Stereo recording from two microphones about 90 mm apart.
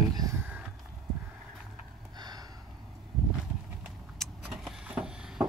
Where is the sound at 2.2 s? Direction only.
50° right (ahead or behind).